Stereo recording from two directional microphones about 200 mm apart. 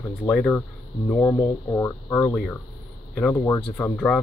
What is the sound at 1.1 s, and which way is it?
Speech, 10° left (ahead or behind).